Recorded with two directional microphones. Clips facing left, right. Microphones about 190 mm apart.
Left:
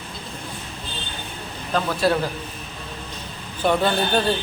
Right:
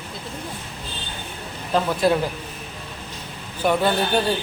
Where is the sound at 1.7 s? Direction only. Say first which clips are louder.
Right 2 dB; 20° right (ahead or behind).